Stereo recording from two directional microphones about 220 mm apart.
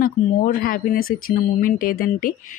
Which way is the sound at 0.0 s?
40° left (ahead or behind).